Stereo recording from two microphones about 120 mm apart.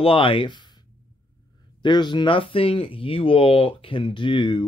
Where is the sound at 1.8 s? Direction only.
40° left (ahead or behind).